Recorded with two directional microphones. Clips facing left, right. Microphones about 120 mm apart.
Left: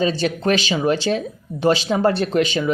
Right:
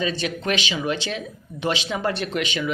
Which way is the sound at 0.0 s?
35° left (ahead or behind).